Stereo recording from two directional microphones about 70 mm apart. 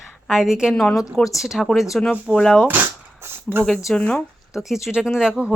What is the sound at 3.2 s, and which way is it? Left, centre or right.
Speech, right.